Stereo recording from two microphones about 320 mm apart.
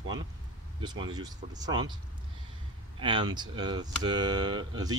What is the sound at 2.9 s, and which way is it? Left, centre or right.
Speech, centre.